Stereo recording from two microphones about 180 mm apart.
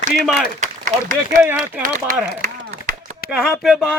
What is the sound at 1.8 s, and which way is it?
Speech, 50° right (ahead or behind).